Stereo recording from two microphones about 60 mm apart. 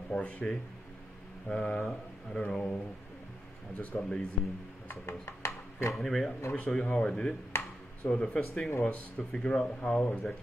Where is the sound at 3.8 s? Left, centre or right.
Left.